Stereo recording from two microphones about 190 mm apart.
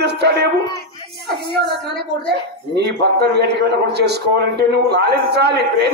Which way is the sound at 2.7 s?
60° right (ahead or behind).